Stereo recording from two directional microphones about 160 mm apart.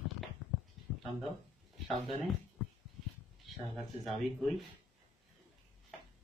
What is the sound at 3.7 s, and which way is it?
Speech, centre (ahead or behind).